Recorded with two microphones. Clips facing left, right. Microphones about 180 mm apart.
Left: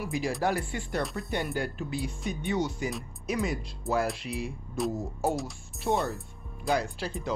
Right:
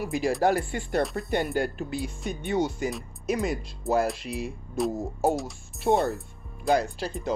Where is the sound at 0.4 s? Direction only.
50° right (ahead or behind).